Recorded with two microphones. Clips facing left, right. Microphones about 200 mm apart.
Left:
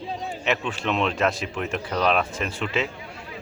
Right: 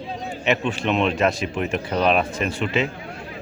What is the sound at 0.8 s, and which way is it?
Speech, 10° right (ahead or behind).